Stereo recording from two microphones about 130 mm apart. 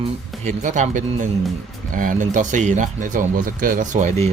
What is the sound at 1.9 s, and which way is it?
Speech, 85° right.